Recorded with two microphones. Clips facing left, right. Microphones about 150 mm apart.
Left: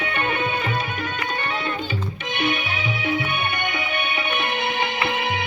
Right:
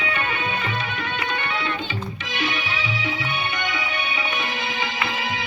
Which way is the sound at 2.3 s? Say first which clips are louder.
Left 2 dB; 55° left (ahead or behind).